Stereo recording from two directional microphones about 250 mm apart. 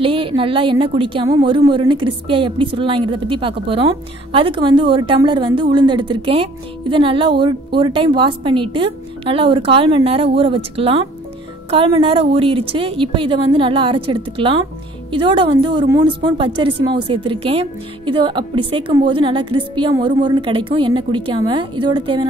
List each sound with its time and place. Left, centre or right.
0.0 s speech: right